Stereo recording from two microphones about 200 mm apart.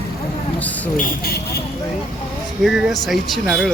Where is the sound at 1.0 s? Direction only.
50° left (ahead or behind).